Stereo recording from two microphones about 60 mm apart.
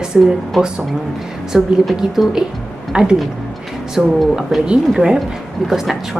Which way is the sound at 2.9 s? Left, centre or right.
Centre.